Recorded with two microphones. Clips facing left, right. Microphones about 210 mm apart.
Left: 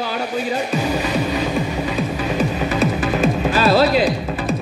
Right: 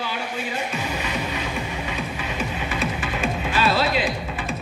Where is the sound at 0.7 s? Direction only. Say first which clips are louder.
Left 8 dB; 35° left (ahead or behind).